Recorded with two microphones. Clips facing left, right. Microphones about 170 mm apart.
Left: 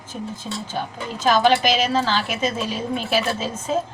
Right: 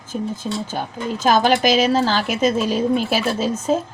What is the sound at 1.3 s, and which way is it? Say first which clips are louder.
A woman's voice: right 1 dB; 45° right (ahead or behind).